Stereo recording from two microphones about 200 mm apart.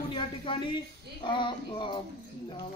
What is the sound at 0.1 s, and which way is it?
A man's voice, 25° left (ahead or behind).